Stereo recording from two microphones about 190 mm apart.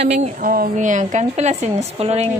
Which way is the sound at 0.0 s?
35° right (ahead or behind).